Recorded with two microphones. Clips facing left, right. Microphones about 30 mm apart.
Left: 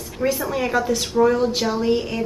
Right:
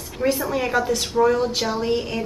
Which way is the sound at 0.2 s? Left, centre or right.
Centre.